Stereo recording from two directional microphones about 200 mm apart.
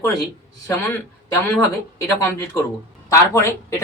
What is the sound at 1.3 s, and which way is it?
Speech, 15° left (ahead or behind).